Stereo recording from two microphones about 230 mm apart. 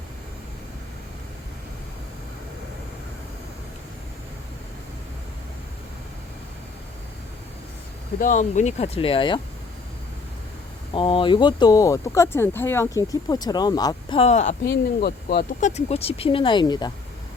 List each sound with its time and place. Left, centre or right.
8.2 s speech: left
10.9 s speech: left
15.0 s speech: left
15.7 s speech: left